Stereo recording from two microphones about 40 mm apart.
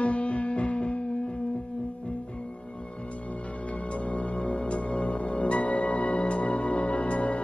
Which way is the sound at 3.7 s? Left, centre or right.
Left.